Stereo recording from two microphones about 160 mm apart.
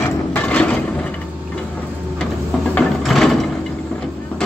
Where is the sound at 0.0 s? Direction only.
10° left (ahead or behind).